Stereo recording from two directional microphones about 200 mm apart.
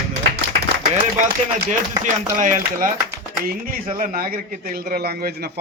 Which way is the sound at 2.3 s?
40° right (ahead or behind).